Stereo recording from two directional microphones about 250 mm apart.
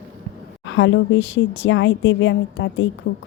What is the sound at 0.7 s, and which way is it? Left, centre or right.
Speech, left.